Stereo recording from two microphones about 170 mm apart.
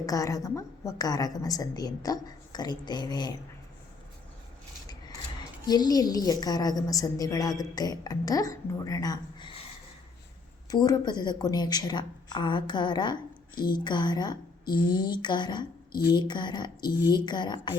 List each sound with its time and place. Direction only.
0.0 s a woman's voice: 20° left (ahead or behind)
5.6 s a woman's voice: 25° left (ahead or behind)
10.7 s a woman's voice: 20° left (ahead or behind)